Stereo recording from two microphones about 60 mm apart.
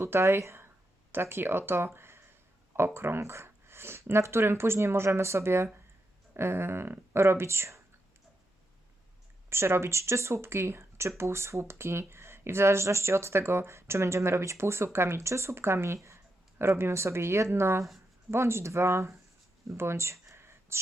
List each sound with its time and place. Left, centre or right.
0.0 s speech: right
9.5 s speech: right
19.6 s a sound: right